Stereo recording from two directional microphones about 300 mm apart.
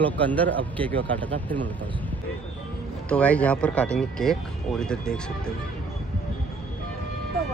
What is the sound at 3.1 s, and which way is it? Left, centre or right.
Speech, centre.